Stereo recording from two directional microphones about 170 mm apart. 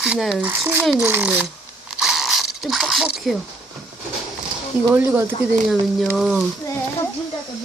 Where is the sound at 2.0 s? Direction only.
Centre (ahead or behind).